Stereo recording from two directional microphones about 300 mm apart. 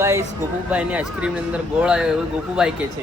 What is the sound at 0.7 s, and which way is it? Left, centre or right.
Speech, centre.